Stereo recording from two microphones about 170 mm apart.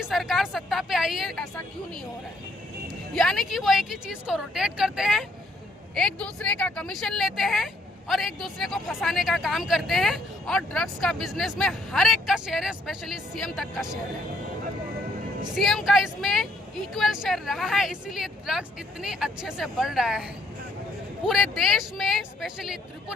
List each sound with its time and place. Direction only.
0.0 s speech: centre (ahead or behind)
3.2 s speech: centre (ahead or behind)
15.5 s speech: centre (ahead or behind)